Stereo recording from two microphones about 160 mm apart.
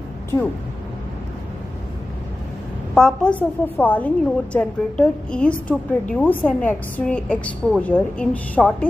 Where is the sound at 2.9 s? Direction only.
5° left (ahead or behind).